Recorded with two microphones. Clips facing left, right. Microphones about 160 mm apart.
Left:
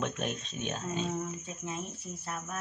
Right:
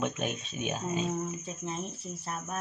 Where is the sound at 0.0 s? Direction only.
Centre (ahead or behind).